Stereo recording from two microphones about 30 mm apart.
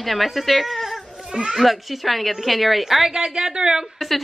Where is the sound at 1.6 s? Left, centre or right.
Centre.